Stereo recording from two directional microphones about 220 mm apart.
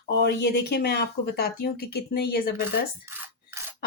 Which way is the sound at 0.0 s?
50° left (ahead or behind).